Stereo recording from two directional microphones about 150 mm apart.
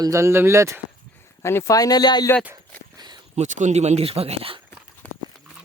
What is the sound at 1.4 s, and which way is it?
Speech, 20° left (ahead or behind).